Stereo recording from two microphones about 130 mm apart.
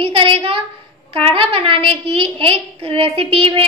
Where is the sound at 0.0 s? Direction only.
45° right (ahead or behind).